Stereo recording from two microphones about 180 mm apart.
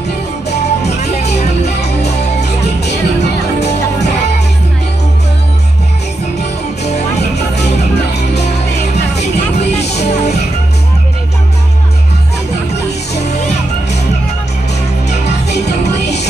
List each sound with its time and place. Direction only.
0.5 s music: 40° left (ahead or behind)
9.2 s music: 40° left (ahead or behind)